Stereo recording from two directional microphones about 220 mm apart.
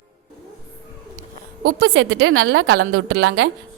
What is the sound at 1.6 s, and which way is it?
A woman's voice, 50° right (ahead or behind).